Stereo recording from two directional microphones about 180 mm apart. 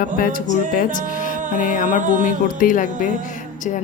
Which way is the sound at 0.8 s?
45° left (ahead or behind).